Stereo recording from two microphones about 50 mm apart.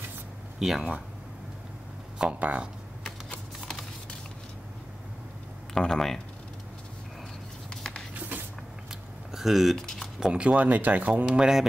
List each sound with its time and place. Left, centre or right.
0.6 s speech: centre
2.3 s speech: right
5.8 s speech: centre
7.7 s a sound: centre
9.3 s speech: centre
9.8 s speech: centre
10.2 s speech: right
11.3 s speech: centre